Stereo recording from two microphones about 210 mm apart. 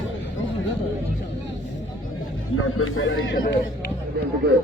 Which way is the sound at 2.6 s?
80° left.